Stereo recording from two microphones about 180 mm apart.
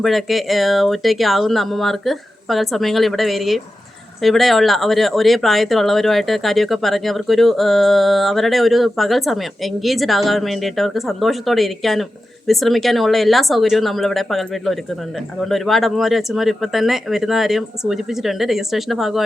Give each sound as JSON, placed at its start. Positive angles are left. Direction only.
{"t": 0.0, "sound": "speech", "side_deg": 0}